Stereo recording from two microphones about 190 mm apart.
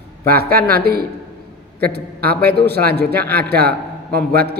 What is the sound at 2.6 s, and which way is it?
Speech, 55° right (ahead or behind).